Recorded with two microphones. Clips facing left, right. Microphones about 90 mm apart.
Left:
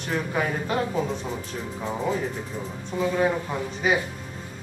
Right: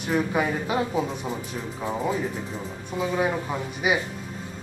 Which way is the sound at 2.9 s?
15° right (ahead or behind).